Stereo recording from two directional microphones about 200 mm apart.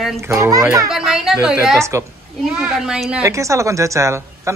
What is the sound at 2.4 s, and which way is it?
Speech, 5° right (ahead or behind).